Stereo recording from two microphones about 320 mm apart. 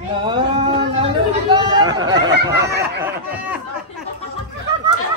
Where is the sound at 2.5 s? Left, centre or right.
Right.